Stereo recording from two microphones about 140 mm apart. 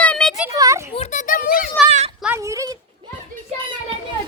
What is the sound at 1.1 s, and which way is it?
Speech, 65° left (ahead or behind).